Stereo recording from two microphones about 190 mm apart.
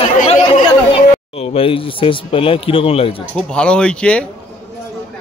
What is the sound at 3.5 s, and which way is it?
Speech, 5° left (ahead or behind).